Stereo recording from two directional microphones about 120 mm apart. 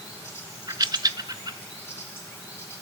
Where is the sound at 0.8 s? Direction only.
35° right (ahead or behind).